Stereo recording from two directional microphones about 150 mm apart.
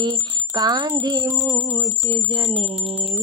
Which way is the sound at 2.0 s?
35° right (ahead or behind).